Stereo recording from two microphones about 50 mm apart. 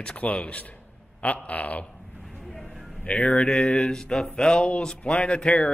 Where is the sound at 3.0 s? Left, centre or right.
Left.